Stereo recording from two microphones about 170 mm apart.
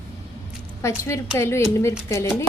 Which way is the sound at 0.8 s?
15° left (ahead or behind).